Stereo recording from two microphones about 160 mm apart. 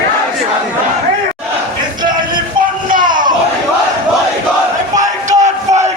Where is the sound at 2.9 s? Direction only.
60° right (ahead or behind).